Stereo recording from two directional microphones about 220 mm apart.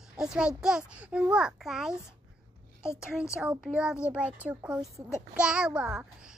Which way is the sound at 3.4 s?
5° right (ahead or behind).